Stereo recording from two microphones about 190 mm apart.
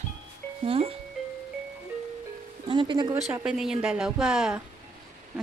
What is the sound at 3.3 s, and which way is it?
Speech, 5° right (ahead or behind).